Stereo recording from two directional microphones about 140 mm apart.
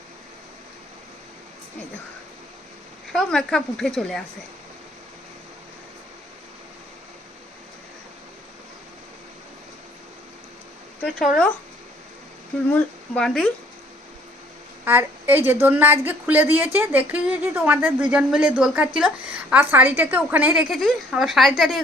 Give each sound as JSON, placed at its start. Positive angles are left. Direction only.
{"t": 3.1, "sound": "speech", "side_deg": 5}
{"t": 12.7, "sound": "speech", "side_deg": 5}
{"t": 14.8, "sound": "a woman's voice", "side_deg": -15}